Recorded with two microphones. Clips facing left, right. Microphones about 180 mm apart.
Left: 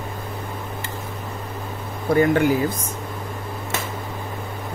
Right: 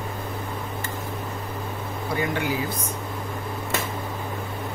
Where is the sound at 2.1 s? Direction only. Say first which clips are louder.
Left 10 dB; 50° left (ahead or behind).